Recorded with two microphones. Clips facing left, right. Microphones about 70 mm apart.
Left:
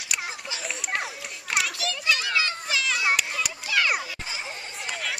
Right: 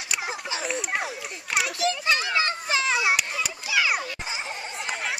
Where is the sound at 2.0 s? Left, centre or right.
Right.